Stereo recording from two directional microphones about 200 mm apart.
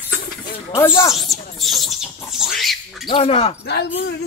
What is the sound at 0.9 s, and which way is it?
Speech, 15° left (ahead or behind).